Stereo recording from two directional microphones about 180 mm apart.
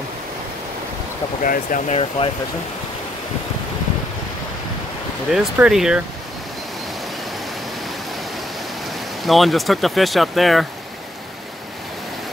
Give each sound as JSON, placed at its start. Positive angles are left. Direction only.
{"t": 1.4, "sound": "speech", "side_deg": 45}
{"t": 2.0, "sound": "speech", "side_deg": 30}
{"t": 5.3, "sound": "speech", "side_deg": 0}
{"t": 9.2, "sound": "speech", "side_deg": 0}